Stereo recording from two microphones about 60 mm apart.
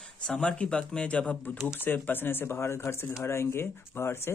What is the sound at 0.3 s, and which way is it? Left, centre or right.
Speech, centre.